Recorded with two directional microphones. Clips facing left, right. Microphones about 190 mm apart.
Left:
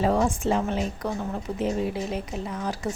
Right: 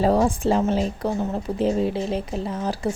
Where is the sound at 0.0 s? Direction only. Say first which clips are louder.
Right 4 dB; 35° right (ahead or behind).